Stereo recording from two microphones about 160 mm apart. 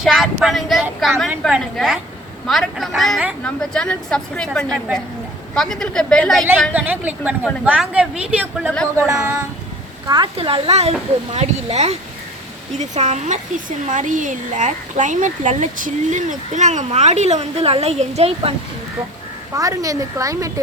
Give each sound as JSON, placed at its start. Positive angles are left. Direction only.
{"t": 0.0, "sound": "a woman's voice", "side_deg": 0}
{"t": 6.7, "sound": "a woman's voice", "side_deg": -10}
{"t": 10.3, "sound": "speech", "side_deg": -35}
{"t": 19.5, "sound": "a woman's voice", "side_deg": -20}